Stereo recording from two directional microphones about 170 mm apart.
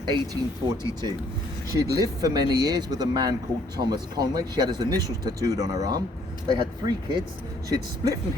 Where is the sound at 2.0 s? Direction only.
25° right (ahead or behind).